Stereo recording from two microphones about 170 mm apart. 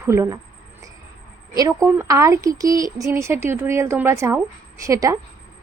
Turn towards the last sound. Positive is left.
turn(degrees=-20)  # may be behind; listen again after turning